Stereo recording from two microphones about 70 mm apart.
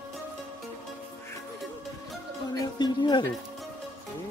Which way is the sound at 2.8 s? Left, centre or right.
Left.